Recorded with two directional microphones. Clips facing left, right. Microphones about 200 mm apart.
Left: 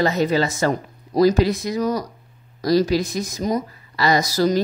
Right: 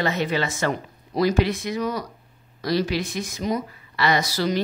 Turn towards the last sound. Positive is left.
turn(degrees=40)  # may be behind; listen again after turning